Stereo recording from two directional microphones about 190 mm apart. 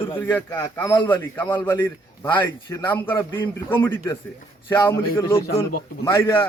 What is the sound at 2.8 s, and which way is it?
A man's voice, 10° left (ahead or behind).